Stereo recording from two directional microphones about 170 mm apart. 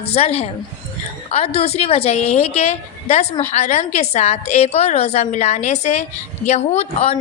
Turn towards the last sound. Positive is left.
turn(degrees=40)  # may be behind; listen again after turning